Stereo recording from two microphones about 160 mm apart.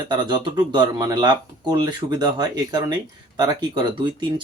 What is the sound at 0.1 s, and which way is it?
Speech, 30° right (ahead or behind).